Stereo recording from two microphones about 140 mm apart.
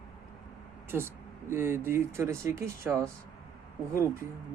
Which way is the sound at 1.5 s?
15° right (ahead or behind).